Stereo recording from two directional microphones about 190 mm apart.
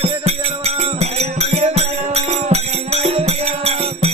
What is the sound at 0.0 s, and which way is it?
Music, 35° right (ahead or behind).